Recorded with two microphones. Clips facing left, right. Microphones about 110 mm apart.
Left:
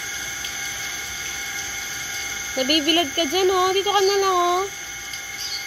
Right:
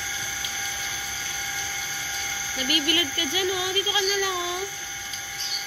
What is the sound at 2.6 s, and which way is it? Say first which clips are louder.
Speech: left 7 dB; 55° left (ahead or behind).